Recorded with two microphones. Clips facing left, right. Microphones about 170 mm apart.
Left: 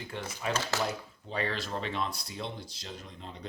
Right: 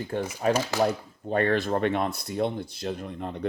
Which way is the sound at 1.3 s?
50° right (ahead or behind).